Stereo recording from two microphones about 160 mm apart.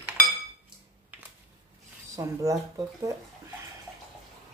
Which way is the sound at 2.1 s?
20° right (ahead or behind).